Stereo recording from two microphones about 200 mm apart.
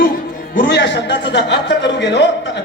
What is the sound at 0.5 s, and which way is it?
A woman's voice, 50° left (ahead or behind).